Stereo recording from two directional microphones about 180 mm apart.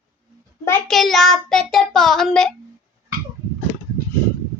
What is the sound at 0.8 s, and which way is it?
Child singing, centre (ahead or behind).